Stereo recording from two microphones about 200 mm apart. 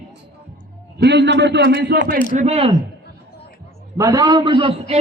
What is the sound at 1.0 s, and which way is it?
A man's voice, 60° right (ahead or behind).